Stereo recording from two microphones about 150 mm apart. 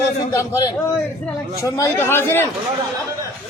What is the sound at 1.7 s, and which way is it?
Speech, 20° left (ahead or behind).